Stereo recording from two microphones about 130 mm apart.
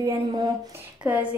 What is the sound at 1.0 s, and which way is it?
Speech, 10° right (ahead or behind).